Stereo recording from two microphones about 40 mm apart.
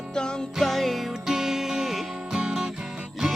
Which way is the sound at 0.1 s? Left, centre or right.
Left.